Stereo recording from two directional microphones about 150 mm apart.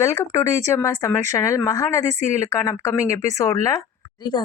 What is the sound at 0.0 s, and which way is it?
A woman's voice, 20° left (ahead or behind).